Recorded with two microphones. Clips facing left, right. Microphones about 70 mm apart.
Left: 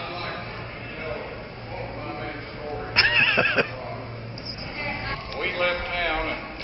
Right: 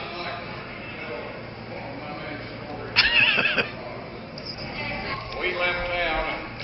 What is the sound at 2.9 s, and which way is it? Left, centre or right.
Music, centre.